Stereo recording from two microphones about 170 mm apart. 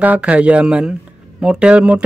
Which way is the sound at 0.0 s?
10° right (ahead or behind).